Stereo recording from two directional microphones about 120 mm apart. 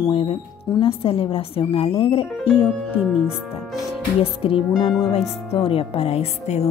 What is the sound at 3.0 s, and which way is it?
Speech, 5° right (ahead or behind).